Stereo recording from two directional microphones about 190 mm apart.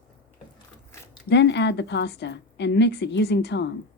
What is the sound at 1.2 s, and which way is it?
A woman's voice, 65° left (ahead or behind).